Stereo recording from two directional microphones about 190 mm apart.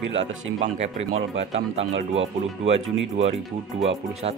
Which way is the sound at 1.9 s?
90° right.